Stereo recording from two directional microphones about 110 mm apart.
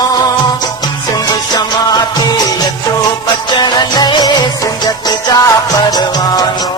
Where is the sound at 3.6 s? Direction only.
45° left (ahead or behind).